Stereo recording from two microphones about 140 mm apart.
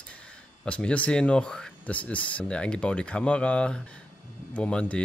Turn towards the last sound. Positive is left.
turn(degrees=10)  # may be behind; listen again after turning